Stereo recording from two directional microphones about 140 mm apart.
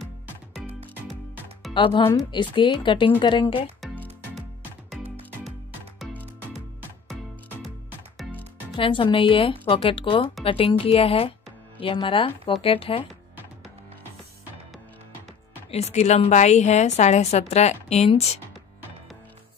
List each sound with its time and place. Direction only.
1.7 s speech: 35° left (ahead or behind)
8.7 s speech: 40° left (ahead or behind)
15.7 s a woman's voice: 55° left (ahead or behind)